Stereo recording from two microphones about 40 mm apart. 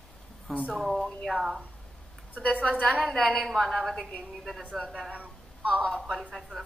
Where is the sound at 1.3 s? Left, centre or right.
Centre.